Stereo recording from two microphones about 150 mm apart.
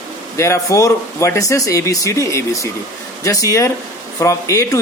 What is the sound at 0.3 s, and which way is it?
Speech, 20° left (ahead or behind).